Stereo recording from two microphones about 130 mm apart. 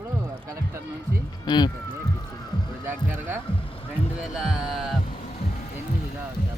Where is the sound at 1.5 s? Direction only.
35° left (ahead or behind).